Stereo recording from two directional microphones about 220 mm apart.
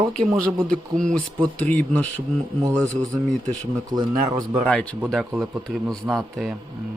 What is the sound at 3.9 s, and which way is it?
Speech, 15° right (ahead or behind).